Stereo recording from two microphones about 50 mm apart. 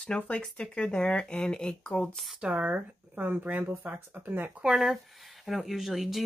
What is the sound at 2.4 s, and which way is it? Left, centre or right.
Speech, right.